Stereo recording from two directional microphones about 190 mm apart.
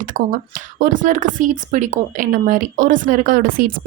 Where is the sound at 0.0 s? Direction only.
45° right (ahead or behind).